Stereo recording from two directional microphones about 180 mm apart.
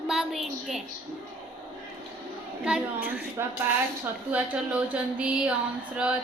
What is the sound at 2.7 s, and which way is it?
Speech, 5° right (ahead or behind).